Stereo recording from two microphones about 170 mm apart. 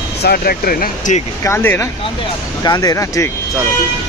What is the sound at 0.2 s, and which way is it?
Speech, 65° left (ahead or behind).